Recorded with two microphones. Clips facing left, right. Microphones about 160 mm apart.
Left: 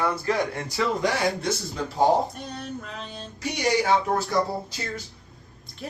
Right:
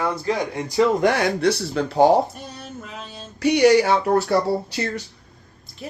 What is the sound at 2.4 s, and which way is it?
Speech, 5° right (ahead or behind).